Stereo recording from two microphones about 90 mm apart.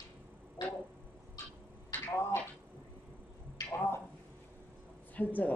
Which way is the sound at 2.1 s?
30° left (ahead or behind).